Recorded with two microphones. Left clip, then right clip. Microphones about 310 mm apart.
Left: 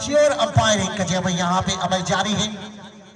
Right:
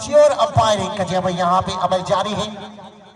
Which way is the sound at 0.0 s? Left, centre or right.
Centre.